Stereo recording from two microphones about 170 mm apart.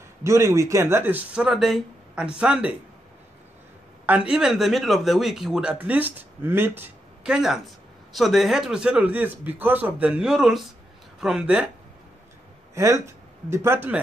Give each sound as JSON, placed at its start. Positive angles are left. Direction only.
{"t": 0.2, "sound": "speech", "side_deg": -15}
{"t": 4.0, "sound": "a man's voice", "side_deg": -5}
{"t": 12.7, "sound": "speech", "side_deg": -20}